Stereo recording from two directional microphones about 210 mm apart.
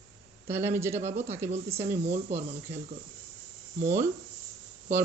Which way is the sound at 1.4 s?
35° right (ahead or behind).